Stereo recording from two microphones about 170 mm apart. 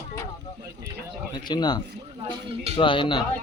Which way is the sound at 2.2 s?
35° right (ahead or behind).